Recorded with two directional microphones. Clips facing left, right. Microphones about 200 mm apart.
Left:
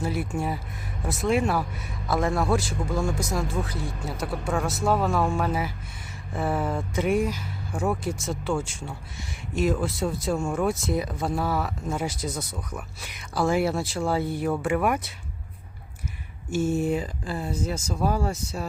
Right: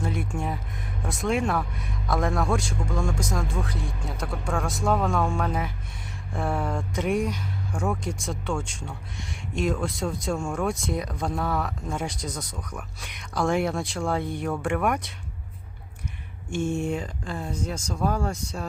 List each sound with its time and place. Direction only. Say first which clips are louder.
0.0 s speech: left 2 dB; 5° left (ahead or behind)
16.5 s speech: left 3 dB; 5° left (ahead or behind)